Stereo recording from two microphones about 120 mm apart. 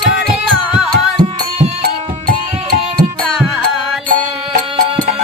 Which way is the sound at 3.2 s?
Centre (ahead or behind).